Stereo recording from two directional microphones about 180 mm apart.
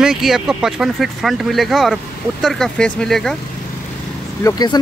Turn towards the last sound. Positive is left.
turn(degrees=20)  # may be behind; listen again after turning